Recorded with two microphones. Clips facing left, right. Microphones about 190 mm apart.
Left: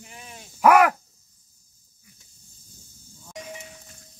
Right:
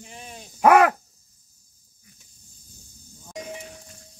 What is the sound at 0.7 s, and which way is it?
Speech, 30° right (ahead or behind).